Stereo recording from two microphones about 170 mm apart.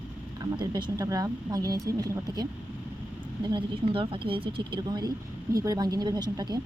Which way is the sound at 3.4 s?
30° right (ahead or behind).